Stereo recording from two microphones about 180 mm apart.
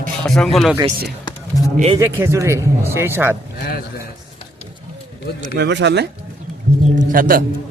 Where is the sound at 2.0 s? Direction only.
15° right (ahead or behind).